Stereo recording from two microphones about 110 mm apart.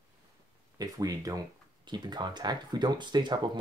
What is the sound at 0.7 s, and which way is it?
Speech, 35° right (ahead or behind).